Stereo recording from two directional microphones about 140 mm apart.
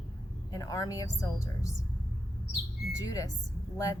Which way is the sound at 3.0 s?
25° left (ahead or behind).